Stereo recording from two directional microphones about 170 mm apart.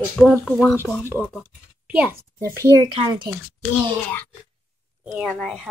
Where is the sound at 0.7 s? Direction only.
15° left (ahead or behind).